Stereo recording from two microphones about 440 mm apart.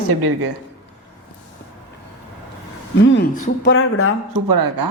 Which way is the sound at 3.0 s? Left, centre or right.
Left.